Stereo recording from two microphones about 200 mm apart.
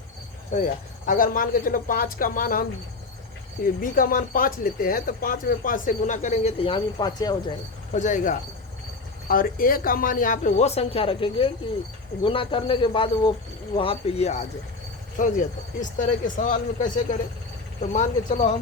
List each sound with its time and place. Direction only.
0.5 s speech: 45° left (ahead or behind)
3.8 s speech: 45° left (ahead or behind); by 7.3 s 20° left (ahead or behind)
7.9 s speech: 40° left (ahead or behind)